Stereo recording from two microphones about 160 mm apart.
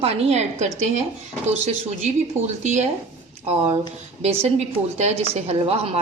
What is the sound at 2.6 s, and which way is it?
Speech, 45° right (ahead or behind).